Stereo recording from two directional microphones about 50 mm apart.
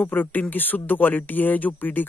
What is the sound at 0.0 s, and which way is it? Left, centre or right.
Speech, left.